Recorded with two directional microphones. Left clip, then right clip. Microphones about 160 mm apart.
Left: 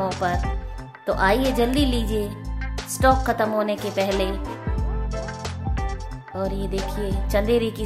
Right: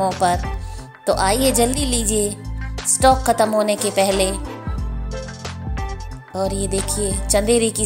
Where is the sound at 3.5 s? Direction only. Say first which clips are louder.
Right 5 dB; 30° right (ahead or behind).